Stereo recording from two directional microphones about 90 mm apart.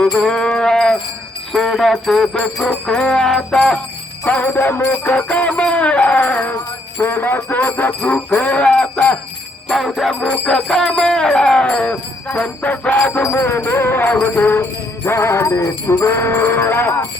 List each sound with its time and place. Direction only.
0.0 s music: 10° left (ahead or behind)
1.5 s jingle bell: 5° left (ahead or behind)
2.6 s music: 10° left (ahead or behind)
4.2 s music: 15° left (ahead or behind)
9.6 s jingle bell: centre (ahead or behind)
10.2 s music: 10° left (ahead or behind)
13.3 s jingle bell: 25° left (ahead or behind)